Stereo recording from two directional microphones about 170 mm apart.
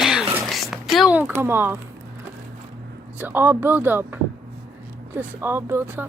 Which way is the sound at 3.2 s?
10° right (ahead or behind).